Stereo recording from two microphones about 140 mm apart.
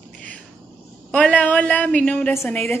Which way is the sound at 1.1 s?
10° left (ahead or behind).